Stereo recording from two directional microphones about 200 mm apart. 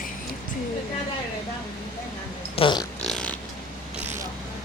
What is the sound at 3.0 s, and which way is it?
Pig, 5° left (ahead or behind).